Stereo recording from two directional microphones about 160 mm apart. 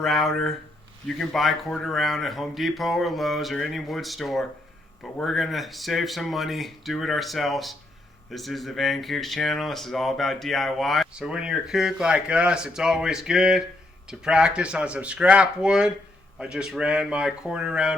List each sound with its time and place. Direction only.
0.0 s speech: centre (ahead or behind)